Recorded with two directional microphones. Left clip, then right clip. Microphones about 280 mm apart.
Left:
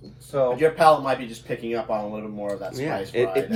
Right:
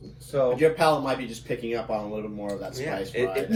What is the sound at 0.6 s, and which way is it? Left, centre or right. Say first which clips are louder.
A man's voice: left 6 dB; centre.